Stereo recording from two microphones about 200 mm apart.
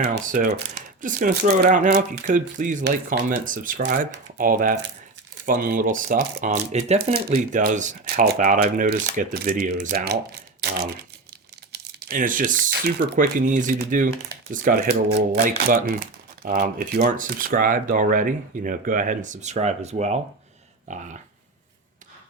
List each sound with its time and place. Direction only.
0.0 s speech: 50° right (ahead or behind)
1.0 s speech: 40° right (ahead or behind)
10.6 s typing: 50° right (ahead or behind)
11.7 s speech: 50° right (ahead or behind); by 20.1 s 35° right (ahead or behind)
20.8 s a sound: 35° right (ahead or behind)